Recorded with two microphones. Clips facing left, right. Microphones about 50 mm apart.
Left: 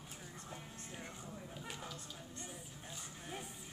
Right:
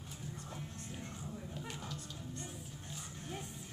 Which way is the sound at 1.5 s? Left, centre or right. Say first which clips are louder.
Right 2 dB; centre.